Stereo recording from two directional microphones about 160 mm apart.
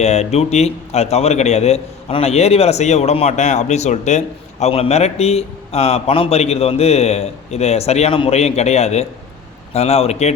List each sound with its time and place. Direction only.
0.0 s a man's voice: 40° left (ahead or behind)